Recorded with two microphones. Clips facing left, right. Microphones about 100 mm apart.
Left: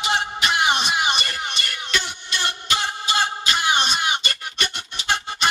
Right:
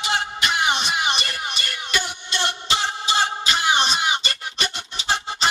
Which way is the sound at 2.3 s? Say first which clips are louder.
Right 1 dB; 30° right (ahead or behind).